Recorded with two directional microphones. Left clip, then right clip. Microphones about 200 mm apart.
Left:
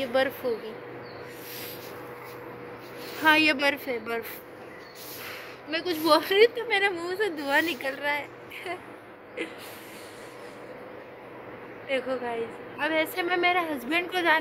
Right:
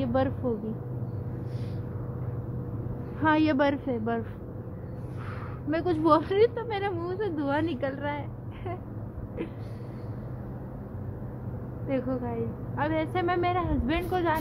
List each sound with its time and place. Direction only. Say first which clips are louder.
0.0 s speech: left 2 dB; centre (ahead or behind)
3.2 s speech: left 3 dB; 5° right (ahead or behind)
5.7 s speech: right 2 dB; 25° right (ahead or behind)
6.0 s speech: left 3 dB; centre (ahead or behind)
11.9 s speech: left 2 dB; centre (ahead or behind)